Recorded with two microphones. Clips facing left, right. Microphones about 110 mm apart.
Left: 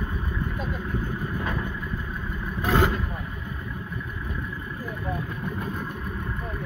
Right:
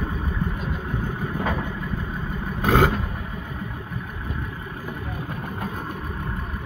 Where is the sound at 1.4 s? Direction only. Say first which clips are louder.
Right 4 dB; 90° right.